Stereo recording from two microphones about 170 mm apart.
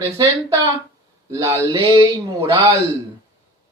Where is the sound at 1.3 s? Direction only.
20° right (ahead or behind).